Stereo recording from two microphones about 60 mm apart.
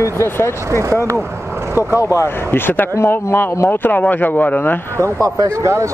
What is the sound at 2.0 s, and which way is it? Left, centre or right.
Speech, left.